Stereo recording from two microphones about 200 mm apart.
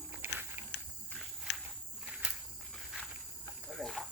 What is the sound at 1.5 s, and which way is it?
Walk, 60° left (ahead or behind).